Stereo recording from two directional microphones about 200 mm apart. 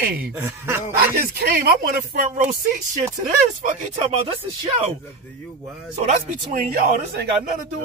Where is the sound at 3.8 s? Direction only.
30° right (ahead or behind).